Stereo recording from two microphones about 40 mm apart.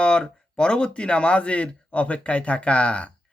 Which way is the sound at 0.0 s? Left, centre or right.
Left.